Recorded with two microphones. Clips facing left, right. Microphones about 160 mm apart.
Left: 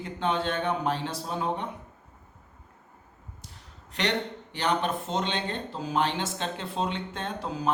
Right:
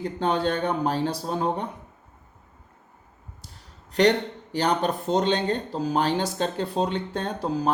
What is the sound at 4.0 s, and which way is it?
Speech, 35° right (ahead or behind).